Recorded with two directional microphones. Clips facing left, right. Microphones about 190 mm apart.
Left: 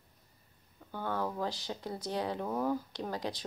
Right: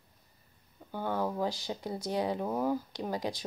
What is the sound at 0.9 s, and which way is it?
A woman's voice, 15° right (ahead or behind).